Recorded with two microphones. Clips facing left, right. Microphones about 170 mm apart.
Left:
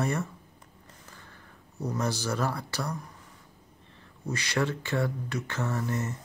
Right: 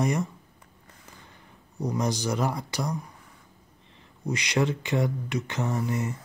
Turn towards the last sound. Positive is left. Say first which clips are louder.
# right 3 dB
turn(degrees=-15)  # may be behind; listen again after turning